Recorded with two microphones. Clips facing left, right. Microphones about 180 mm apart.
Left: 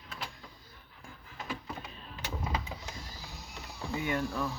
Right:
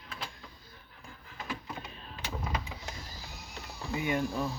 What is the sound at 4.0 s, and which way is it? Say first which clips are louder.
Speech: right 2 dB; 20° right (ahead or behind).